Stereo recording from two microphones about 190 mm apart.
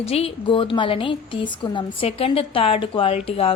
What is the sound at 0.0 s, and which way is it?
A woman's voice, 30° left (ahead or behind).